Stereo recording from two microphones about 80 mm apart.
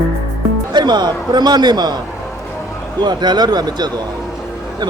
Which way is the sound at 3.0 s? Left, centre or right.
Right.